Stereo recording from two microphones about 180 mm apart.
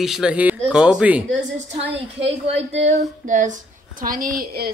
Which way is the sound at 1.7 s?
35° right (ahead or behind).